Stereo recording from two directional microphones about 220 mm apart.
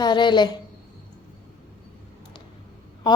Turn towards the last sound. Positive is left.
turn(degrees=20)  # may be behind; listen again after turning